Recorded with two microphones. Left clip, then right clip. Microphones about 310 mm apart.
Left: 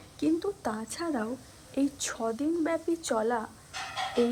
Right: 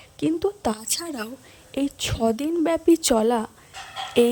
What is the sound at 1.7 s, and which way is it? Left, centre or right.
A woman's voice, right.